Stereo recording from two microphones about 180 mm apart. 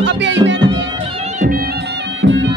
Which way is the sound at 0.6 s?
25° right (ahead or behind).